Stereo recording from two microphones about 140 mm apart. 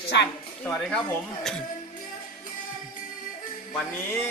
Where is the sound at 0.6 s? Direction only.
5° left (ahead or behind).